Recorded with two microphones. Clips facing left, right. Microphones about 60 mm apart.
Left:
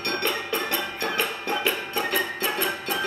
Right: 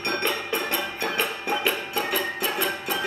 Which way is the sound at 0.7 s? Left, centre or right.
Centre.